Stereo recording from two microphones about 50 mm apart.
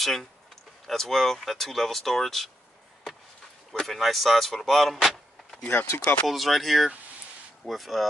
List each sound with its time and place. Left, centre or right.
0.0 s speech: centre
3.7 s speech: centre
5.7 s speech: left
6.2 s speech: centre